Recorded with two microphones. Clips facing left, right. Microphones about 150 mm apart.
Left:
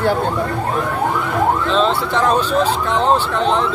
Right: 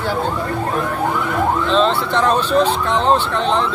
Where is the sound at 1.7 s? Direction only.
5° left (ahead or behind).